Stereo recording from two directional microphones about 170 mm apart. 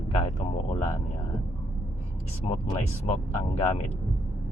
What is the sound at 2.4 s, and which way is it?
Speech, 40° left (ahead or behind).